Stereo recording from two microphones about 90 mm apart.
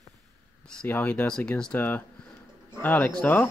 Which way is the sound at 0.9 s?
20° left (ahead or behind).